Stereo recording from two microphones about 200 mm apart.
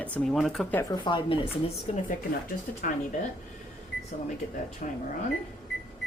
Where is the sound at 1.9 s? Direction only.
35° left (ahead or behind).